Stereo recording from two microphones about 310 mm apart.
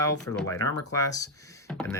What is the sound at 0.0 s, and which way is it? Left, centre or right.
Speech, centre.